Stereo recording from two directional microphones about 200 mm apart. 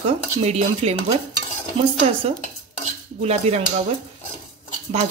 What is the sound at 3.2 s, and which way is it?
Dishes, 35° right (ahead or behind).